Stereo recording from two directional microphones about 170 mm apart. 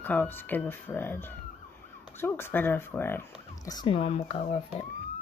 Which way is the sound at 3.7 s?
25° left (ahead or behind).